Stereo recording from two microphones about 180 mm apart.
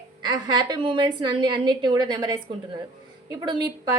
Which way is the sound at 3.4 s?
25° right (ahead or behind).